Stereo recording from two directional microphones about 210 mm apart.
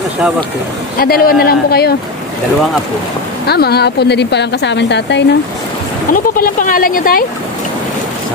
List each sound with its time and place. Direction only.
1.0 s a woman's voice: 45° left (ahead or behind)
3.4 s a woman's voice: 50° left (ahead or behind)
6.1 s a woman's voice: 40° left (ahead or behind)